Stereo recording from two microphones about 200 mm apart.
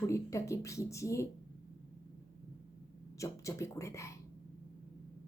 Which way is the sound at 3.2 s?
15° left (ahead or behind).